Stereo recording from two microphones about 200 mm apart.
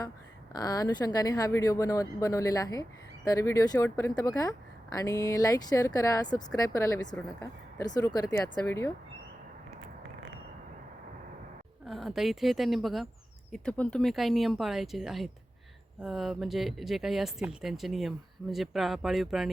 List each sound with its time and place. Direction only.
0.5 s speech: 20° left (ahead or behind)
11.9 s speech: centre (ahead or behind)